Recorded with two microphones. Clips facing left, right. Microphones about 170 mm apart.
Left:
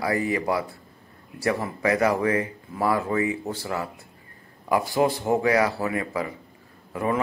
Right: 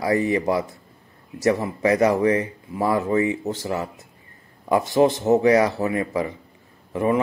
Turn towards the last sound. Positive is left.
turn(degrees=-20)  # may be behind; listen again after turning